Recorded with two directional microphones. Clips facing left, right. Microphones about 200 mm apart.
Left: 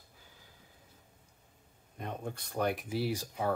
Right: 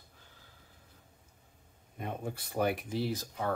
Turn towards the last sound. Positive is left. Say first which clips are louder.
# left 1 dB
turn(degrees=10)  # may be behind; listen again after turning